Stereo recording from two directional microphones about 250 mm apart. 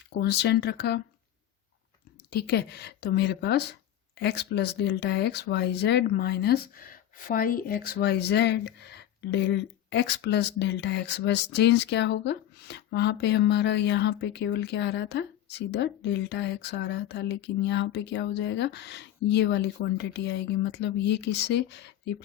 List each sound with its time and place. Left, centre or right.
0.2 s a woman's voice: left
2.3 s a woman's voice: left